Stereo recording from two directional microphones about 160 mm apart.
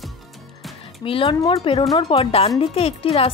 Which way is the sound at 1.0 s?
35° left (ahead or behind).